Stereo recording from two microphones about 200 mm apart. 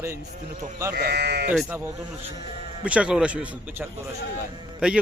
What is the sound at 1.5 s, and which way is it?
A man's voice, 10° right (ahead or behind).